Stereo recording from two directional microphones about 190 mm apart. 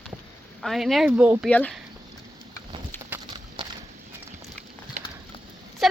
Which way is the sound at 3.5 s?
25° right (ahead or behind).